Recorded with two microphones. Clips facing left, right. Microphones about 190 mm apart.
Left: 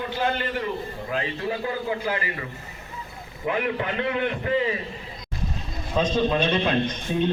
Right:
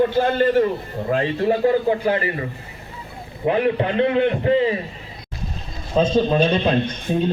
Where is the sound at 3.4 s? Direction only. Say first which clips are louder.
Right 7 dB; 30° right (ahead or behind).